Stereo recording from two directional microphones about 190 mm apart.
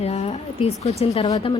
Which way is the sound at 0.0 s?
35° left (ahead or behind).